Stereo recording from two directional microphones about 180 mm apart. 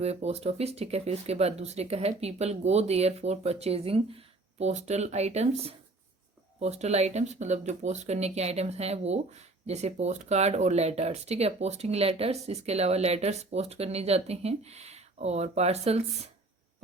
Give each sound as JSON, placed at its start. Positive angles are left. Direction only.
{"t": 0.0, "sound": "speech", "side_deg": -35}